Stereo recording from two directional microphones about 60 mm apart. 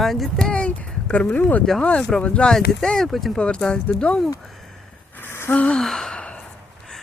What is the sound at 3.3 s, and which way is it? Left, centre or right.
Speech, centre.